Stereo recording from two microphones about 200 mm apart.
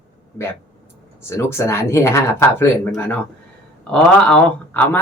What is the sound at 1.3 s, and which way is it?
Speech, 10° left (ahead or behind).